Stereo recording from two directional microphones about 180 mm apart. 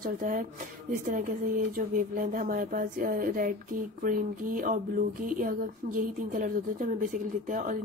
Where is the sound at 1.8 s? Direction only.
50° right (ahead or behind).